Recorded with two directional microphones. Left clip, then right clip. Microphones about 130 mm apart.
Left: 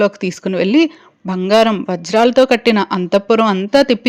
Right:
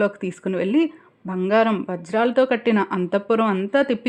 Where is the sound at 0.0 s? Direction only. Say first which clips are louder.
Left 7 dB; 20° left (ahead or behind).